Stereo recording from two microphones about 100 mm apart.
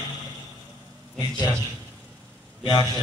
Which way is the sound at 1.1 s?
45° left (ahead or behind).